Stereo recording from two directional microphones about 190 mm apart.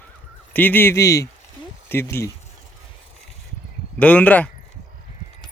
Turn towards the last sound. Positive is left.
turn(degrees=10)  # may be behind; listen again after turning